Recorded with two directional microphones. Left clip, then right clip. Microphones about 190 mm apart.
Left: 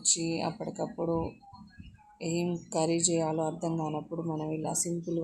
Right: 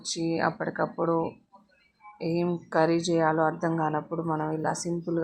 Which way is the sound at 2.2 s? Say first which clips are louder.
Right 4 dB; 5° right (ahead or behind).